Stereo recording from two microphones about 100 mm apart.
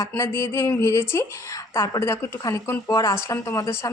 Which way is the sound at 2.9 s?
35° left (ahead or behind).